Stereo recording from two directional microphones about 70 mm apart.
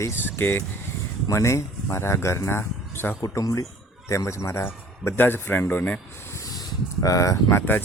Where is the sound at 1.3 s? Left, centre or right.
Left.